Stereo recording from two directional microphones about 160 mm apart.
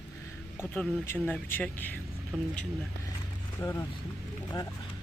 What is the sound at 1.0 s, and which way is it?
Speech, 15° left (ahead or behind).